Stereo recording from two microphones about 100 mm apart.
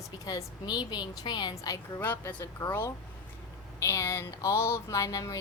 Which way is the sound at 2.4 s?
30° left (ahead or behind).